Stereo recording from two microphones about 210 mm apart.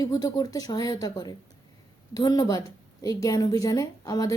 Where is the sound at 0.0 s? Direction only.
20° left (ahead or behind).